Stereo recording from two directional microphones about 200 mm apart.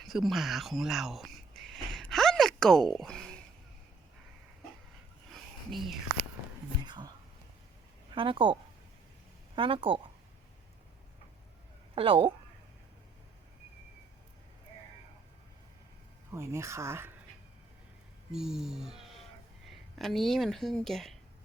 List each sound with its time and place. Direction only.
0.0 s a sound: centre (ahead or behind)
5.3 s a sound: centre (ahead or behind)
6.8 s whispering: 20° right (ahead or behind)
8.1 s speech: 25° right (ahead or behind)
9.6 s speech: 25° right (ahead or behind)
11.9 s speech: 25° right (ahead or behind)
16.3 s speech: 15° right (ahead or behind)
18.3 s speech: centre (ahead or behind)